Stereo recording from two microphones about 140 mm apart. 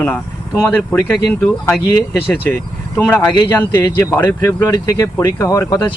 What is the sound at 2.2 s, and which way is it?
Speech, 15° left (ahead or behind).